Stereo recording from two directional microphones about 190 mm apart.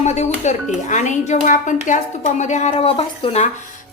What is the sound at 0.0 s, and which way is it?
Speech, 35° left (ahead or behind).